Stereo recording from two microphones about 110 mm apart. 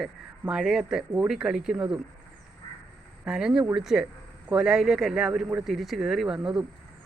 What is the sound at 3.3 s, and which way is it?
Speech, 5° right (ahead or behind).